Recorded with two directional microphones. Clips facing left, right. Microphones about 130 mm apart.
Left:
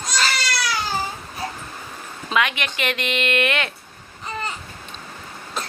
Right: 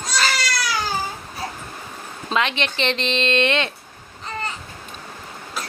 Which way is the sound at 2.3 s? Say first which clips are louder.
Even; 30° right (ahead or behind).